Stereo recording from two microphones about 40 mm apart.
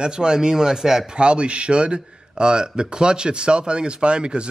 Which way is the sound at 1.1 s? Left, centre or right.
Right.